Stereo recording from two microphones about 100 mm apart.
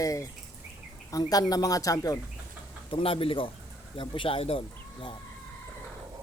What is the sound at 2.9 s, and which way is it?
Speech, 65° left (ahead or behind).